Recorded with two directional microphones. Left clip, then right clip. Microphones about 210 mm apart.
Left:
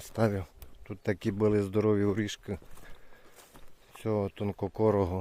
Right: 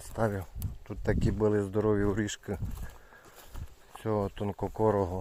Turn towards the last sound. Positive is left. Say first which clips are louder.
# even
turn(degrees=25)  # may be behind; listen again after turning